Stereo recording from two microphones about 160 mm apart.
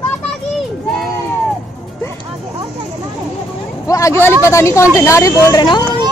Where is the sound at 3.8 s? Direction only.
20° left (ahead or behind).